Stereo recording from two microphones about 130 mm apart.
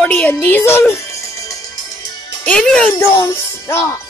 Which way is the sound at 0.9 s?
25° left (ahead or behind).